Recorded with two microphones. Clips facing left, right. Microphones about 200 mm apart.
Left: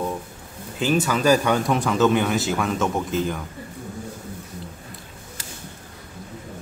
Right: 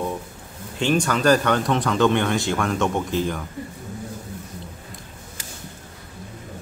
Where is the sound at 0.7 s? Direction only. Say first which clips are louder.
Even; 5° left (ahead or behind).